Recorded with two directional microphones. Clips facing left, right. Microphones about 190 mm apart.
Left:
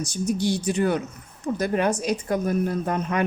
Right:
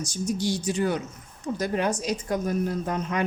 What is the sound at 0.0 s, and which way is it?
A woman's voice, 60° left (ahead or behind).